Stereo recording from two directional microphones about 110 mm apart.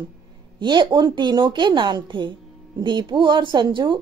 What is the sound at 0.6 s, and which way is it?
Speech, 45° right (ahead or behind).